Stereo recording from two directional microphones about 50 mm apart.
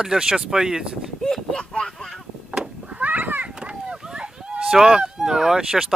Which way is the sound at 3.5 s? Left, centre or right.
Centre.